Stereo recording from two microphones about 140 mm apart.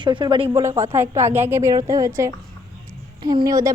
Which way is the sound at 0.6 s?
20° right (ahead or behind).